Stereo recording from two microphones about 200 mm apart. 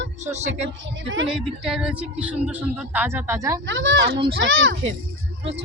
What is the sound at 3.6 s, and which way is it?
A woman's voice, 75° right (ahead or behind).